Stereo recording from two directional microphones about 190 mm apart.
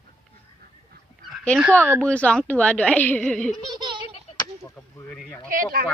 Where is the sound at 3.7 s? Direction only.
25° right (ahead or behind).